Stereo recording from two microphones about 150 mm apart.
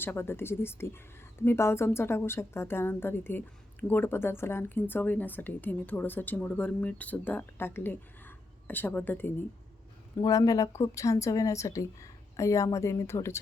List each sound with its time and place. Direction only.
0.0 s a woman's voice: 15° left (ahead or behind)
10.2 s speech: 20° left (ahead or behind)